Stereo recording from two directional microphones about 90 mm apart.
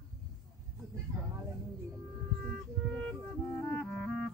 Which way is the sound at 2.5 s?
10° left (ahead or behind).